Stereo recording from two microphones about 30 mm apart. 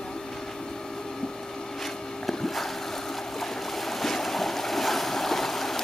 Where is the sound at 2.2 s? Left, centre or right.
Centre.